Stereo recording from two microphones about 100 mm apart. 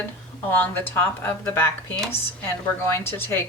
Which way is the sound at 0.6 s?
20° left (ahead or behind).